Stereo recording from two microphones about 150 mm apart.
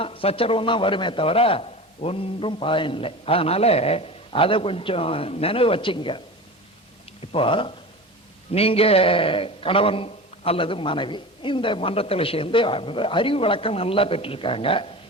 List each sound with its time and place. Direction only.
0.0 s a man's voice: 35° left (ahead or behind)
7.3 s a man's voice: 35° left (ahead or behind)